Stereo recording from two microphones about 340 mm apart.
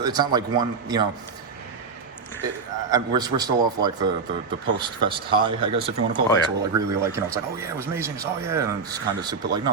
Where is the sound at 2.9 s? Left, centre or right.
Centre.